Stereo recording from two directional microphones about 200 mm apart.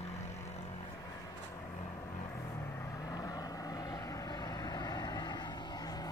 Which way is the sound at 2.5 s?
15° left (ahead or behind).